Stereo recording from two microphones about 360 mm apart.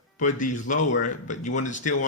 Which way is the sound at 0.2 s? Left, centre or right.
Left.